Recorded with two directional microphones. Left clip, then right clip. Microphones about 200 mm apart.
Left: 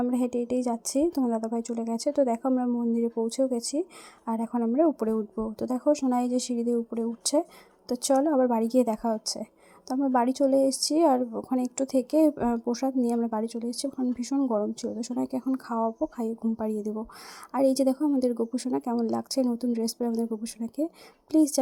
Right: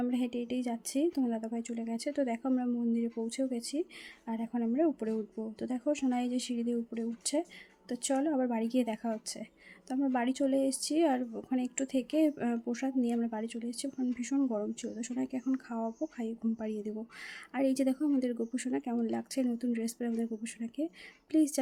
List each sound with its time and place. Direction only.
0.0 s speech: 20° left (ahead or behind)
17.9 s speech: centre (ahead or behind)
18.3 s speech: 20° left (ahead or behind)